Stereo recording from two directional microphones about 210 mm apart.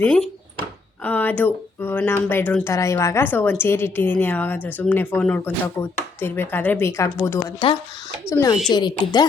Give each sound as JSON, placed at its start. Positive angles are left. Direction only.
{"t": 0.0, "sound": "speech", "side_deg": 5}